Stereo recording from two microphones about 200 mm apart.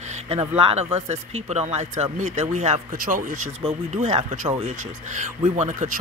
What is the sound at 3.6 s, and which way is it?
Speech, 30° right (ahead or behind).